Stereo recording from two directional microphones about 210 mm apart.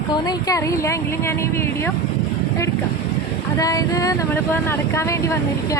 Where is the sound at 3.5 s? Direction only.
15° left (ahead or behind).